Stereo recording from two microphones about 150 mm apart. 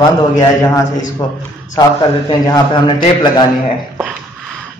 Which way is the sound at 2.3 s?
30° left (ahead or behind).